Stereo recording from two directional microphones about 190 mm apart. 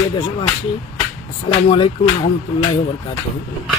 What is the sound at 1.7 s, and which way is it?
Speech, 25° left (ahead or behind).